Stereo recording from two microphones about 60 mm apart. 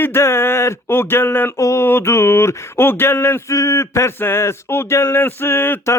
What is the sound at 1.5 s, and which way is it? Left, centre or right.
Speech, left.